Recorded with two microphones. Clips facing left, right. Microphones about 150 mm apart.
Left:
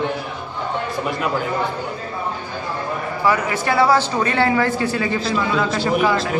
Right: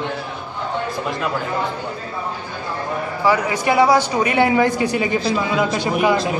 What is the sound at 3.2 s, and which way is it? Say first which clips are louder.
A man's voice: right 1 dB; 15° right (ahead or behind).